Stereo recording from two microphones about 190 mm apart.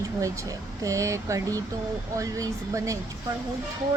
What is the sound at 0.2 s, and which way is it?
Speech, 15° right (ahead or behind).